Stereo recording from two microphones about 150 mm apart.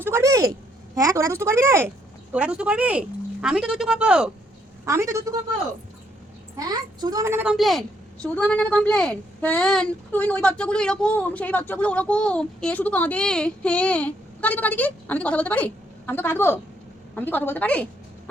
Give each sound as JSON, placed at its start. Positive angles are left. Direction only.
{"t": 0.0, "sound": "a woman's voice", "side_deg": -20}
{"t": 2.3, "sound": "a woman's voice", "side_deg": -10}
{"t": 4.9, "sound": "a woman's voice", "side_deg": -20}
{"t": 6.6, "sound": "a woman's voice", "side_deg": -25}
{"t": 7.5, "sound": "a woman's voice", "side_deg": 0}